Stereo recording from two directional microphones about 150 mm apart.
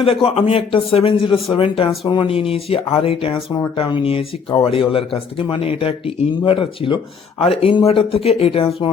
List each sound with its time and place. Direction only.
0.0 s speech: 40° left (ahead or behind)